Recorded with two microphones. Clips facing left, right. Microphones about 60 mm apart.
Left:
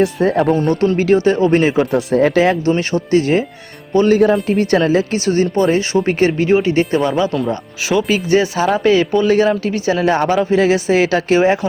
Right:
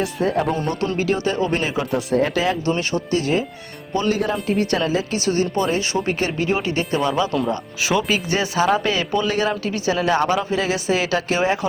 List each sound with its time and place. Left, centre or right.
0.2 s speech: left
0.5 s speech: left
1.9 s speech: centre
2.1 s speech: left
2.6 s speech: left
4.4 s a woman's voice: left
5.1 s speech: left
7.3 s speech: centre
8.3 s speech: left